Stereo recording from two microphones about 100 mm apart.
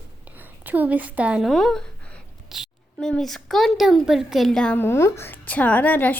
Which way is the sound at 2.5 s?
5° right (ahead or behind).